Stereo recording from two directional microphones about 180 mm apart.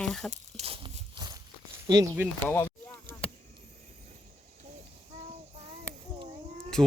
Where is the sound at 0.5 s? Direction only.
35° right (ahead or behind).